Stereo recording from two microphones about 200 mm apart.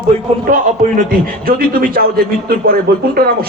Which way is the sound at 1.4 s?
45° right (ahead or behind).